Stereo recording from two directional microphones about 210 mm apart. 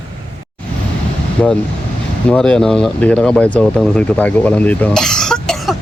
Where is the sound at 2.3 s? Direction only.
5° left (ahead or behind).